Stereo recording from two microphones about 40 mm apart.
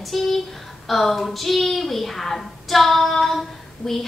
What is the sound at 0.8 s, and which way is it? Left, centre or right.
A woman's voice, centre.